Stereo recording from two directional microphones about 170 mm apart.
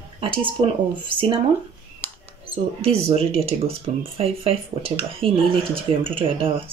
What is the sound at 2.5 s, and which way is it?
Speech, 35° right (ahead or behind).